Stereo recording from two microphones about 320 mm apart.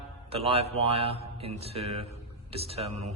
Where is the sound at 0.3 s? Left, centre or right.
Centre.